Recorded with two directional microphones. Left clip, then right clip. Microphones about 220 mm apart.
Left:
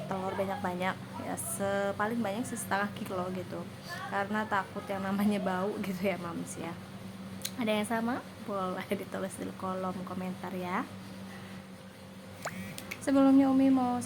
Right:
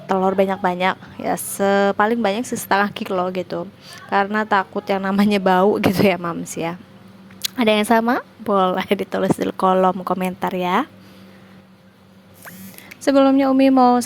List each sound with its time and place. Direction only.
0.1 s a woman's voice: 40° right (ahead or behind)
13.1 s a woman's voice: 35° right (ahead or behind)